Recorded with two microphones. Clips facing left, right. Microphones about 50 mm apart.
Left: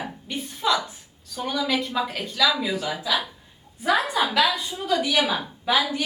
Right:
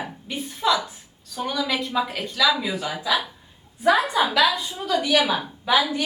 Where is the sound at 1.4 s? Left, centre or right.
Centre.